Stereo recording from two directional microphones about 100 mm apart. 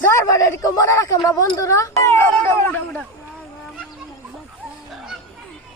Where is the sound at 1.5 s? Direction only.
35° left (ahead or behind).